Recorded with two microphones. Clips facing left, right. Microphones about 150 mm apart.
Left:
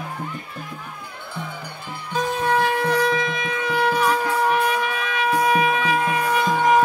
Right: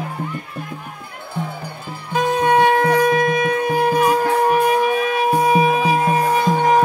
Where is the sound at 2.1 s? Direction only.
65° right (ahead or behind); by 6.5 s 40° right (ahead or behind).